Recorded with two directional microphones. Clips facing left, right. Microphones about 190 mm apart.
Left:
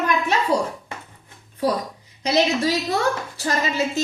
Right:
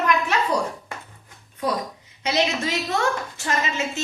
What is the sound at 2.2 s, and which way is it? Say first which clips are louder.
A woman's voice: left 4 dB; 35° left (ahead or behind).